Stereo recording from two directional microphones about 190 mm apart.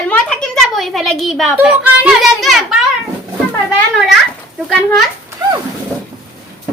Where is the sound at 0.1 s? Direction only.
5° left (ahead or behind).